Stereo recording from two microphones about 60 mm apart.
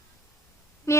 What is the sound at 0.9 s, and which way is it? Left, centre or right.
Music, left.